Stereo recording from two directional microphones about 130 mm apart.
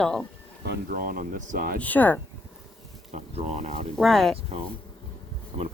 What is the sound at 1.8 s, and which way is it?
Speech, 15° left (ahead or behind).